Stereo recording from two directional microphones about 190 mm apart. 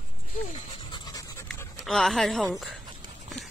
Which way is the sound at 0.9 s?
20° left (ahead or behind).